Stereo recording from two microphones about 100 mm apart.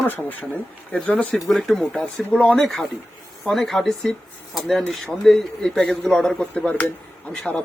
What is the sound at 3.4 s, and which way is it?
A man's voice, centre (ahead or behind).